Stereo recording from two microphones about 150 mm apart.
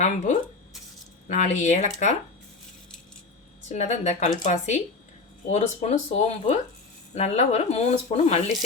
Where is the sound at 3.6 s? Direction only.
50° left (ahead or behind).